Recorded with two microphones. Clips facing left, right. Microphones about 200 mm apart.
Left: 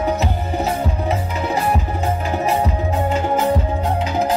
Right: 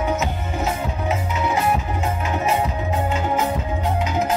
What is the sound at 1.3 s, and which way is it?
Music, 35° left (ahead or behind).